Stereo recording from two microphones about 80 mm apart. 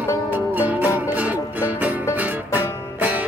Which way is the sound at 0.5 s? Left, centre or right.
Right.